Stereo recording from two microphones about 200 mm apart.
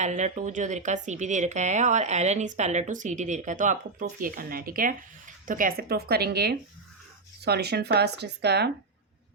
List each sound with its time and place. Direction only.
0.0 s a woman's voice: 35° right (ahead or behind); by 8.7 s 55° right (ahead or behind)